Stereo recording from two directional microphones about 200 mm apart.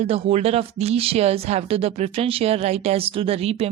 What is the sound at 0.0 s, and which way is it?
Speech, 30° right (ahead or behind).